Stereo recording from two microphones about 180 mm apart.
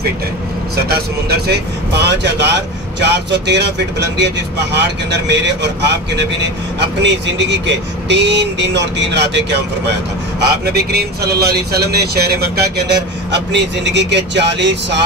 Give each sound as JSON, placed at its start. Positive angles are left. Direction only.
{"t": 1.5, "sound": "speech", "side_deg": -70}
{"t": 10.6, "sound": "speech", "side_deg": -60}